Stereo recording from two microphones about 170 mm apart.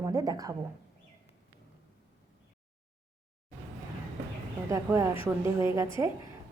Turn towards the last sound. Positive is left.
turn(degrees=-15)  # may be behind; listen again after turning